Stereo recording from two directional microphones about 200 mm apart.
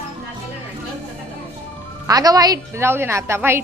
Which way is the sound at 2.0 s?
20° right (ahead or behind).